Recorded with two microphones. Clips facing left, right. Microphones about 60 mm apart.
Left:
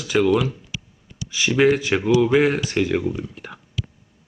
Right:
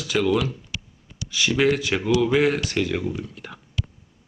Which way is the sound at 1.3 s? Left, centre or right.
Centre.